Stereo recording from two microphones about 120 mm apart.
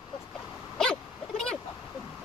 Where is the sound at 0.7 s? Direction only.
5° left (ahead or behind).